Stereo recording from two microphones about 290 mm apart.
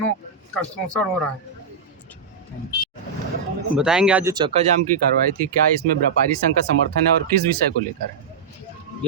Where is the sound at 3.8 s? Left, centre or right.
Centre; by 4.9 s right.